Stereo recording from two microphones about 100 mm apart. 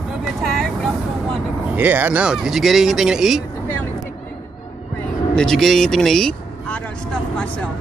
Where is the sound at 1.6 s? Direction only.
15° right (ahead or behind).